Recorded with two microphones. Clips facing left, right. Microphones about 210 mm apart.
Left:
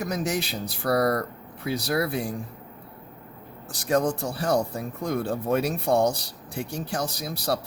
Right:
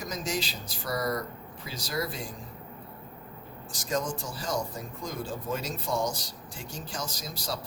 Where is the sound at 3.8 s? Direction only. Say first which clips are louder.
Left 8 dB; 60° left (ahead or behind).